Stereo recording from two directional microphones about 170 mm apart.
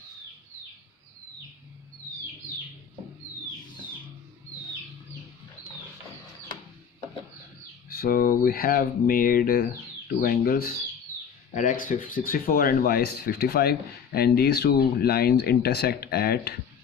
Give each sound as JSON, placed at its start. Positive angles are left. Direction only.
{"t": 7.9, "sound": "speech", "side_deg": 60}
{"t": 11.5, "sound": "speech", "side_deg": 50}